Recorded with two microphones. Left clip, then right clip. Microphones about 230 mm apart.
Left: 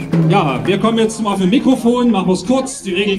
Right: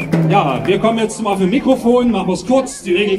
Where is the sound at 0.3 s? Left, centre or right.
Left.